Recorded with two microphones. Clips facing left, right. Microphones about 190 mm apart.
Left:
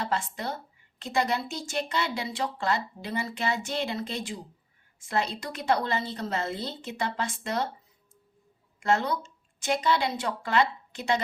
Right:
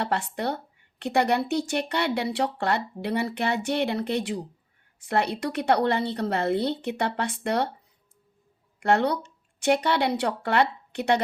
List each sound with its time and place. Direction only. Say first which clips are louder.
0.0 s speech: right 4 dB; 65° right (ahead or behind)
8.8 s speech: right 4 dB; 65° right (ahead or behind)